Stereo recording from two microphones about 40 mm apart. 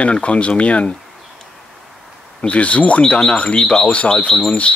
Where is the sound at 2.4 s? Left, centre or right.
Left.